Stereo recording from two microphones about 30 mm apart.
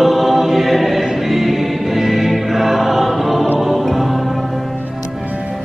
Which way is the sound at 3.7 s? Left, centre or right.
Centre.